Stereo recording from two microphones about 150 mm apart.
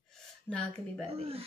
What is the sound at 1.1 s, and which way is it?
Speech, 40° right (ahead or behind).